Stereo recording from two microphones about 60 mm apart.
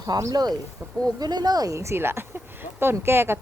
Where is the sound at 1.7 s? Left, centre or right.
Right.